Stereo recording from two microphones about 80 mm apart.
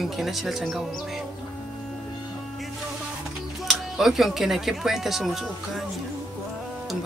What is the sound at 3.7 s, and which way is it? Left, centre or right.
Speech, centre.